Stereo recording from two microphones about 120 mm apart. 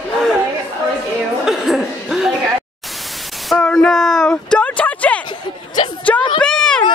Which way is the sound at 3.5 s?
5° left (ahead or behind).